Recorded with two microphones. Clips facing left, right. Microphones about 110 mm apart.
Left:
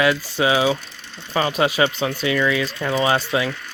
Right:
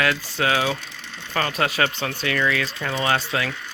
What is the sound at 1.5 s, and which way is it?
Speech, centre (ahead or behind).